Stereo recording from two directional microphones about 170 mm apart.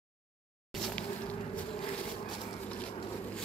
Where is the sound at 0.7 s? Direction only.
5° left (ahead or behind).